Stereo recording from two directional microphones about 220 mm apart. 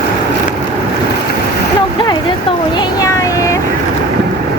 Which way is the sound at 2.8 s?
15° left (ahead or behind).